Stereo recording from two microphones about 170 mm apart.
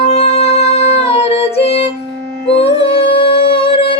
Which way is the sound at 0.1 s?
40° left (ahead or behind).